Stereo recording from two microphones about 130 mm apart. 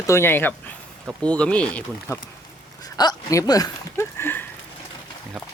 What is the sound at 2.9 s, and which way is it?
Speech, 30° left (ahead or behind).